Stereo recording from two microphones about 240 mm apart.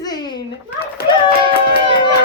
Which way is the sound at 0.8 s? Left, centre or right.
Left.